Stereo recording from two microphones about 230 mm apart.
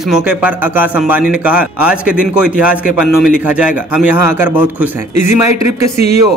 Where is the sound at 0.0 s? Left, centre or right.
Centre.